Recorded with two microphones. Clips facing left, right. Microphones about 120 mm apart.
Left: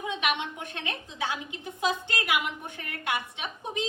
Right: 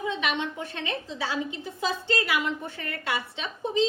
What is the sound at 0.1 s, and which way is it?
A woman's voice, 15° left (ahead or behind).